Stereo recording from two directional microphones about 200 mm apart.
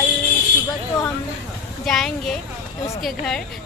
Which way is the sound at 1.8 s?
Centre (ahead or behind).